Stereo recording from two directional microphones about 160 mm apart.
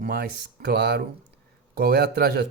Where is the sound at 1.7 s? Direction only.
80° right.